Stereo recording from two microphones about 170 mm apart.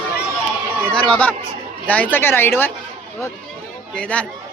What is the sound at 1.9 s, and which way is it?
Speech, 10° left (ahead or behind).